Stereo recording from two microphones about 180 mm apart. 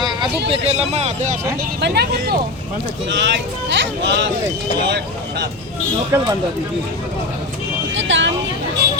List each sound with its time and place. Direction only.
0.0 s vehicle: 25° right (ahead or behind)
0.5 s speech: 35° right (ahead or behind)
1.8 s speech: 65° right (ahead or behind)
3.1 s speech: 80° right
4.9 s speech: 70° right (ahead or behind)
6.1 s speech: 20° right (ahead or behind)
7.9 s speech: 90° right